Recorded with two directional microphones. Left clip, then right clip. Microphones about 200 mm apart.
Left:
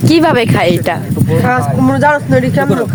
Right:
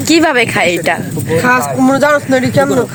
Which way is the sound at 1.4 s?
50° right (ahead or behind).